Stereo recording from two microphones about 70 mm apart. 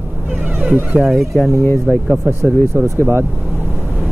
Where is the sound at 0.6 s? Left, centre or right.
Right.